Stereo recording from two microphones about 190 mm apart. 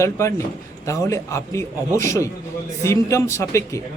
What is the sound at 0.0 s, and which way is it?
A man's voice, 15° left (ahead or behind).